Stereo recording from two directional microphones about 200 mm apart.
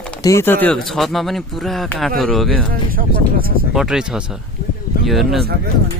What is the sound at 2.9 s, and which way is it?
Speech, 45° right (ahead or behind).